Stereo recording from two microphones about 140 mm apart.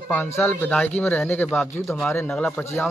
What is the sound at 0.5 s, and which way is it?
A man's voice, 10° left (ahead or behind).